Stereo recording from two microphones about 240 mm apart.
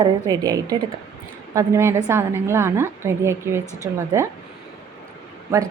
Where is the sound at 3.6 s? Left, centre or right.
Centre.